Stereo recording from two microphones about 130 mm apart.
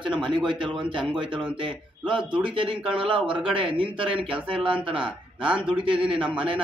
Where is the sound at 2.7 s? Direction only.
5° right (ahead or behind).